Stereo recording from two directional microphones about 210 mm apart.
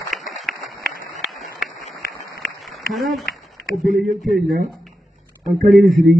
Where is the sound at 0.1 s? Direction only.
Centre (ahead or behind).